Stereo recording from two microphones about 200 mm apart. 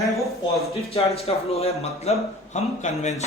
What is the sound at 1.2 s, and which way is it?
A man's voice, 30° left (ahead or behind).